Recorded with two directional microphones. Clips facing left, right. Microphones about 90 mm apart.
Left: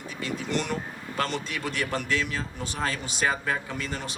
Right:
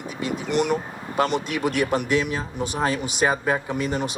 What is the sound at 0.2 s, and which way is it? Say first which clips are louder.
Speech: right 6 dB; 20° right (ahead or behind).